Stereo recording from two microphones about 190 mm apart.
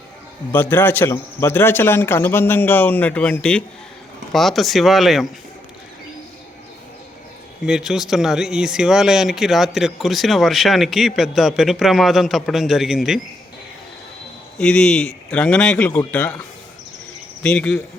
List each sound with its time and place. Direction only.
0.5 s a man's voice: 10° left (ahead or behind)
7.6 s speech: 5° right (ahead or behind)
14.6 s speech: 5° left (ahead or behind)
17.4 s speech: 5° left (ahead or behind)